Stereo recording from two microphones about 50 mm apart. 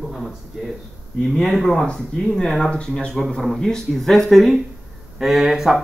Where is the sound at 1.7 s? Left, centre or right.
Centre.